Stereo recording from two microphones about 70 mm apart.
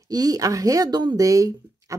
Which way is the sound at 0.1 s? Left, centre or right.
Right.